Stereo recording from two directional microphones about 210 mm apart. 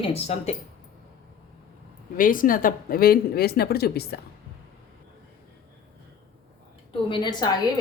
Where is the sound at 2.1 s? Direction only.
40° left (ahead or behind).